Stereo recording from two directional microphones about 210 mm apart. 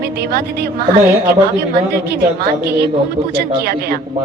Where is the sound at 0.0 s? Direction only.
50° right (ahead or behind).